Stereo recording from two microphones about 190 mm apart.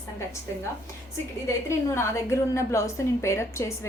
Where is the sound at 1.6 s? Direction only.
15° left (ahead or behind).